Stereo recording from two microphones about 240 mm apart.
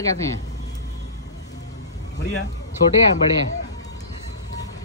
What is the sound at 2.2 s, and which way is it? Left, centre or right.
Speech, left.